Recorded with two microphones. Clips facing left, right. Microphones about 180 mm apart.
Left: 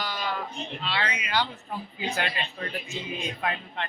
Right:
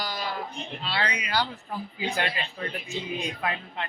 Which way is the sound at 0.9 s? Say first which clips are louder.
Right 1 dB; 35° right (ahead or behind).